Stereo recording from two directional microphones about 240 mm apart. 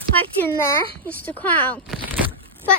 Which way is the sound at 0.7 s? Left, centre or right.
Centre.